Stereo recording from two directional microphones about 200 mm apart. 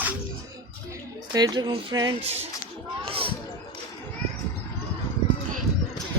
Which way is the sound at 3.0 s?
25° right (ahead or behind).